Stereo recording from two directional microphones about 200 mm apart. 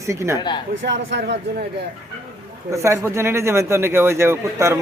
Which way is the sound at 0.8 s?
60° right (ahead or behind).